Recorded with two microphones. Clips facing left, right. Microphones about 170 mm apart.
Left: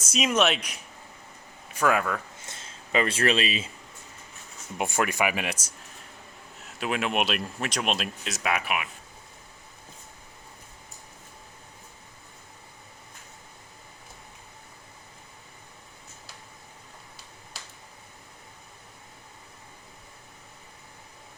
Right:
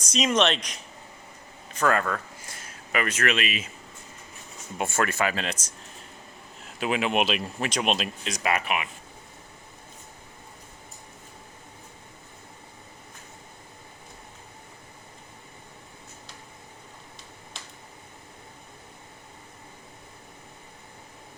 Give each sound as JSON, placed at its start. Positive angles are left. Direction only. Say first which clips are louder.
{"t": 0.0, "sound": "speech", "louder": "right 1 dB", "side_deg": 5}
{"t": 2.4, "sound": "a sound", "louder": "right 1 dB", "side_deg": 25}
{"t": 4.8, "sound": "speech", "louder": "even", "side_deg": 15}
{"t": 6.7, "sound": "speech", "louder": "right 2 dB", "side_deg": 0}